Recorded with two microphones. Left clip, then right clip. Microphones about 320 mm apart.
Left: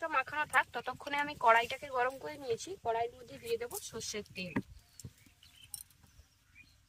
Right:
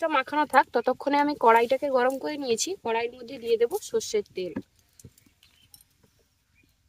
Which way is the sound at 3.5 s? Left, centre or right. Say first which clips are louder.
Right 14 dB; right.